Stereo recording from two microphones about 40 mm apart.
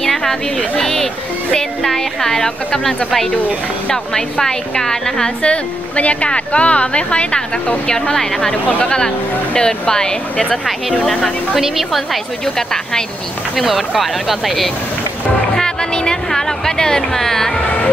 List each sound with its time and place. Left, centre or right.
0.0 s a sound: centre
0.7 s a woman's voice: centre
5.4 s a woman's voice: left
11.1 s a woman's voice: centre
11.5 s speech: centre
12.5 s a woman's voice: centre
13.7 s speech: centre
15.5 s music: centre
16.3 s a woman's voice: centre